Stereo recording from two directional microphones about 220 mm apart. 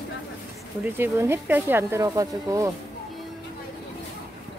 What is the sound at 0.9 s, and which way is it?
Speech, 10° right (ahead or behind).